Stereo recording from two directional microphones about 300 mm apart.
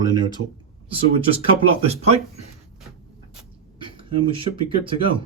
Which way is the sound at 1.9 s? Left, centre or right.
Right.